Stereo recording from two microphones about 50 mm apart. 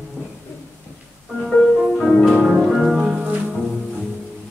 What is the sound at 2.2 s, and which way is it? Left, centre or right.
Music, centre.